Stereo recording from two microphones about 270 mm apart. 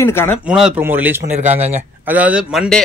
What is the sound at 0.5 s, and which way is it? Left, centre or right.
Speech, centre.